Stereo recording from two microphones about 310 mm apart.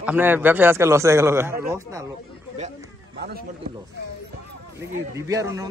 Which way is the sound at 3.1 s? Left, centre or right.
Right.